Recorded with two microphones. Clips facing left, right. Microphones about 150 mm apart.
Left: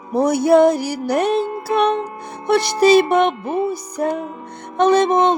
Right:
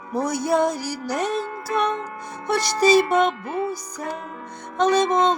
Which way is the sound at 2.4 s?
60° left (ahead or behind).